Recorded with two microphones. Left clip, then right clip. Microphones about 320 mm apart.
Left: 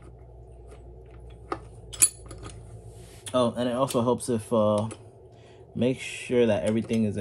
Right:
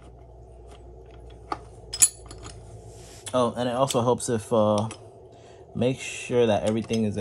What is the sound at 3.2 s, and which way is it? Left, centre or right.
Speech, right.